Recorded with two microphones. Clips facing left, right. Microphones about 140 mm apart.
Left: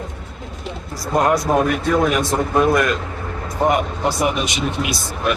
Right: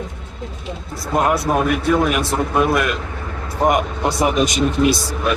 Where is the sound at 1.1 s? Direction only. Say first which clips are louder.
Left 1 dB; 5° right (ahead or behind).